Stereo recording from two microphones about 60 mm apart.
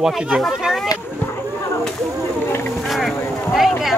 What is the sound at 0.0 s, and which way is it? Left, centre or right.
Speech, centre.